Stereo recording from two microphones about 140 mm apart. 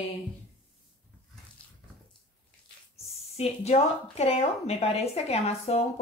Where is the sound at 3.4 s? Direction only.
45° left (ahead or behind).